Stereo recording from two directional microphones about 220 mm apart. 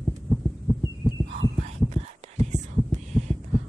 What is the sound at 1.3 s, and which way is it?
Heart sounds, 25° right (ahead or behind).